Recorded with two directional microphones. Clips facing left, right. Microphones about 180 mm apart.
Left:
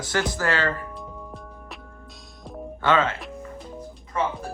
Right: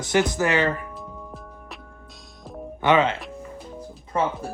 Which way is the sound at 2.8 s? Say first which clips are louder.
Right 3 dB; 20° right (ahead or behind).